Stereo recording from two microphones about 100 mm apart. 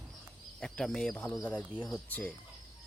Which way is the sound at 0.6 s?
5° left (ahead or behind).